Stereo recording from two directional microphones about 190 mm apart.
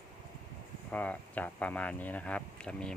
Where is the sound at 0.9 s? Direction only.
10° left (ahead or behind).